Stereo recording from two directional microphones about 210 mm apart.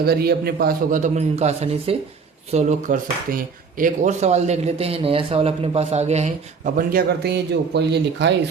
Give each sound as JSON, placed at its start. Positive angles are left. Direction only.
{"t": 0.0, "sound": "speech", "side_deg": -45}
{"t": 6.7, "sound": "speech", "side_deg": -50}